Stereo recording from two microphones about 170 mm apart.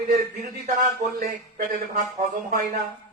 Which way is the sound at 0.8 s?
50° right (ahead or behind).